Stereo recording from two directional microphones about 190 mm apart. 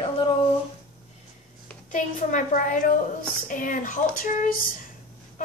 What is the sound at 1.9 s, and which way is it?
A woman's voice, 40° left (ahead or behind).